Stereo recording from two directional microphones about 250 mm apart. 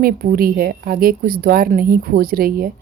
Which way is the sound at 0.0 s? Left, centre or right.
Right.